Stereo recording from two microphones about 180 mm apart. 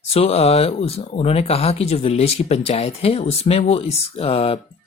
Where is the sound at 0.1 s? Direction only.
35° left (ahead or behind).